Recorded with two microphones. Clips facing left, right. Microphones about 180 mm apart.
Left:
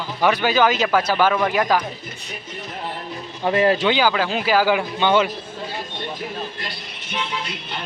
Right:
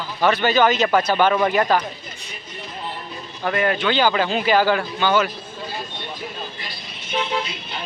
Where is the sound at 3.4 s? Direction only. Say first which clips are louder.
Left 3 dB; 25° left (ahead or behind).